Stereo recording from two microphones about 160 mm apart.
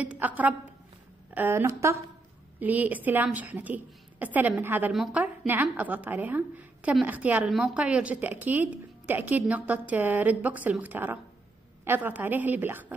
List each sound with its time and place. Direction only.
0.0 s a woman's voice: 10° right (ahead or behind)